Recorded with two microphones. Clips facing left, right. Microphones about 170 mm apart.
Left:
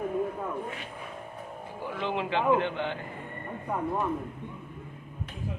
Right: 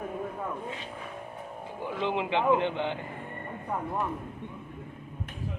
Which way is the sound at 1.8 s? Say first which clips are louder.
Right 1 dB; 20° right (ahead or behind).